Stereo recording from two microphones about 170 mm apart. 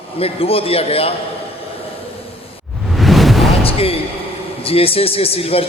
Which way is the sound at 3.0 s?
Centre (ahead or behind).